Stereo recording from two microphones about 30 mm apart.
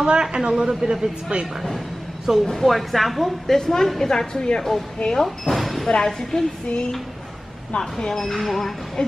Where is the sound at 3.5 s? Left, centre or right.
Centre.